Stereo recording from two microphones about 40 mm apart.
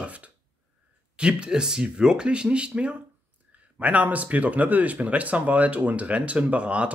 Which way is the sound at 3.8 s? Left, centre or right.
Right.